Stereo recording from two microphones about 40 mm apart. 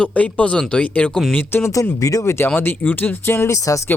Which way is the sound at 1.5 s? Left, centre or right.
Left.